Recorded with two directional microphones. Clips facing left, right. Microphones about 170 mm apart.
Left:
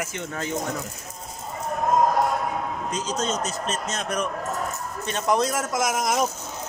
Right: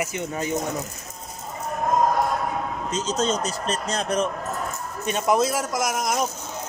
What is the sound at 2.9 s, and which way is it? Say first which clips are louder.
A man's voice: right 4 dB; 25° right (ahead or behind).